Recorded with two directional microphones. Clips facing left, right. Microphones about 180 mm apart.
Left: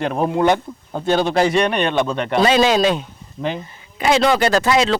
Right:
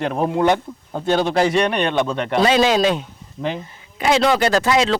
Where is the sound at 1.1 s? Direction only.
Centre (ahead or behind).